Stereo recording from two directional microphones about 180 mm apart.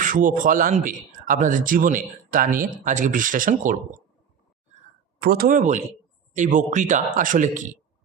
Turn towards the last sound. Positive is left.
turn(degrees=-45)  # may be behind; listen again after turning